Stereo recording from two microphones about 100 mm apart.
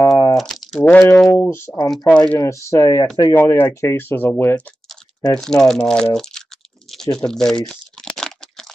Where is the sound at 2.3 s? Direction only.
30° left (ahead or behind).